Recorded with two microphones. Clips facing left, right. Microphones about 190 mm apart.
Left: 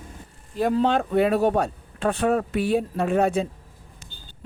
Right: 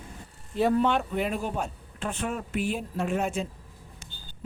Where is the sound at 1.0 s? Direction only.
65° left (ahead or behind).